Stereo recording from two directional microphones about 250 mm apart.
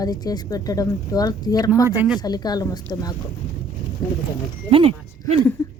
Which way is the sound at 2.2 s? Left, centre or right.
Centre.